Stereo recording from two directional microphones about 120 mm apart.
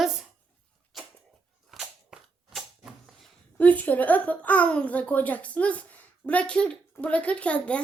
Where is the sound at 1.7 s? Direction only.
Centre (ahead or behind).